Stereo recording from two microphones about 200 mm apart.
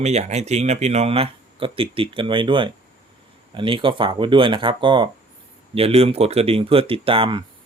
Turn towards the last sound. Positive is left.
turn(degrees=-25)  # may be behind; listen again after turning